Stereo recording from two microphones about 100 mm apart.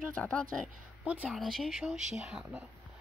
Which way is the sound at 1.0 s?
15° right (ahead or behind).